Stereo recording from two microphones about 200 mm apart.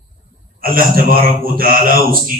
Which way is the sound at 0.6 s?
45° right (ahead or behind).